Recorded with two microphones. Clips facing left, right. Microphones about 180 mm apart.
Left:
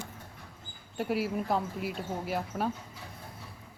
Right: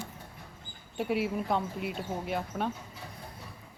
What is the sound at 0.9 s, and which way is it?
Speech, centre (ahead or behind).